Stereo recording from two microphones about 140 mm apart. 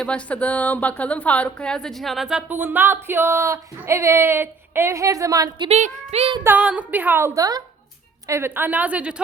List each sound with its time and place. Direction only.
0.0 s a woman's voice: 10° left (ahead or behind); by 5.6 s 25° right (ahead or behind)
5.6 s a woman's voice: 50° right (ahead or behind)
6.4 s a woman's voice: 10° right (ahead or behind)